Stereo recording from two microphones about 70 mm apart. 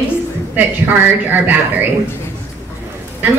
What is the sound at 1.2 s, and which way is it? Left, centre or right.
Speech, right.